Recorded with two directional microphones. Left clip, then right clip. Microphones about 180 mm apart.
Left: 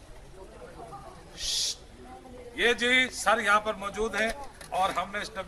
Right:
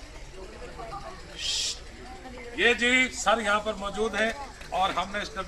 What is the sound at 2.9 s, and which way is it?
A man's voice, 5° left (ahead or behind).